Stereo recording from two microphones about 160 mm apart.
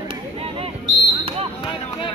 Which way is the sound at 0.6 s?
25° right (ahead or behind).